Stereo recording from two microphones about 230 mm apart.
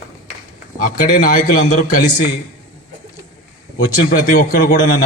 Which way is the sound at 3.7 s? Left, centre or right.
Left.